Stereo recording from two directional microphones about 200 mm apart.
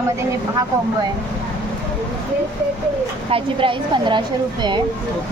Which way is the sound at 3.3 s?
25° right (ahead or behind).